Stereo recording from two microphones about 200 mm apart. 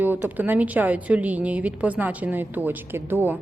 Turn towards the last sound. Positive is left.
turn(degrees=-10)  # may be behind; listen again after turning